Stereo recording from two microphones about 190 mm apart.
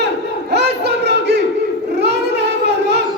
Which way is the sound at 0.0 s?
60° right (ahead or behind).